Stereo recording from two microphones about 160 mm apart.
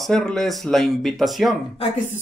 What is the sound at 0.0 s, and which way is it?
Speech, 5° left (ahead or behind).